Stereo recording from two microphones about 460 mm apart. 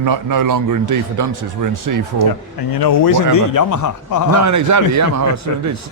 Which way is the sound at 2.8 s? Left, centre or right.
Left.